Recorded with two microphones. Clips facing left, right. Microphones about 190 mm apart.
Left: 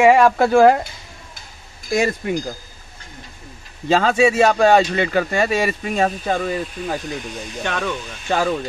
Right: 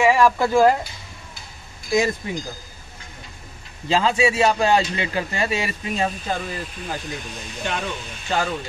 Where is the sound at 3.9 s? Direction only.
55° left (ahead or behind).